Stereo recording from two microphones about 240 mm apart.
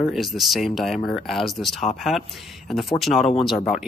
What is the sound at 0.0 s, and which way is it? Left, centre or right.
Speech, centre.